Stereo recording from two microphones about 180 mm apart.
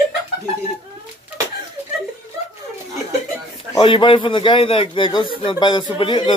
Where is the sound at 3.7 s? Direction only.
30° left (ahead or behind).